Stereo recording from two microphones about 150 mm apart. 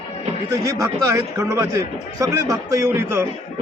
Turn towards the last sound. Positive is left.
turn(degrees=-15)  # may be behind; listen again after turning